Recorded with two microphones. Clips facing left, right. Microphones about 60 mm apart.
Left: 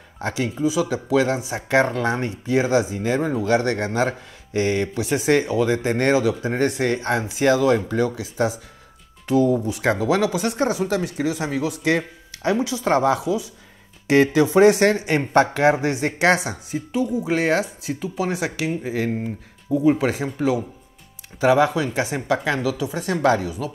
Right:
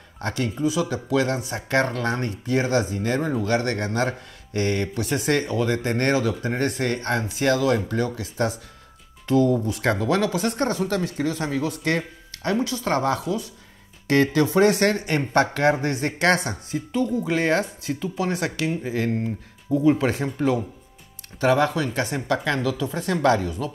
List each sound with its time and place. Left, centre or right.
0.2 s speech: centre